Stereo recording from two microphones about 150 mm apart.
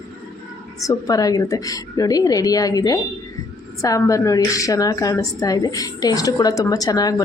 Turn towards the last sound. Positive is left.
turn(degrees=25)  # may be behind; listen again after turning